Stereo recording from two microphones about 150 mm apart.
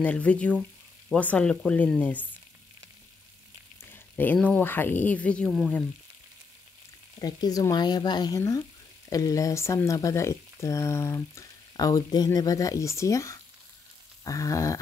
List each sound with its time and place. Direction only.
0.0 s speech: 10° left (ahead or behind)
3.9 s speech: 10° left (ahead or behind)
7.2 s speech: 25° left (ahead or behind)